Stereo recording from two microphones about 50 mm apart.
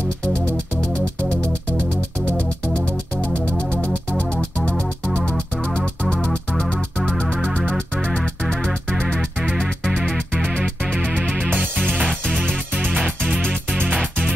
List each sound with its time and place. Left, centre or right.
1.8 s music: right
4.2 s music: left
7.4 s music: centre
11.5 s music: right